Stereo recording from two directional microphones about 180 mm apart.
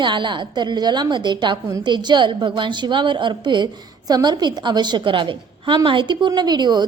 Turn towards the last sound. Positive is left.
turn(degrees=-25)  # may be behind; listen again after turning